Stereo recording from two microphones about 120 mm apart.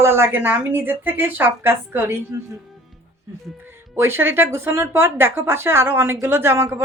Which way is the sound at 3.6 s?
20° right (ahead or behind).